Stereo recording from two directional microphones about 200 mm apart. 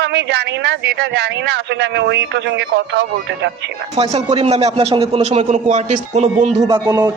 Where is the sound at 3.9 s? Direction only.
30° right (ahead or behind).